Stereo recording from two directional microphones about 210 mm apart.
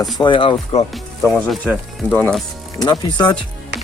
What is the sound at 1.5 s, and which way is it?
Speech, centre (ahead or behind).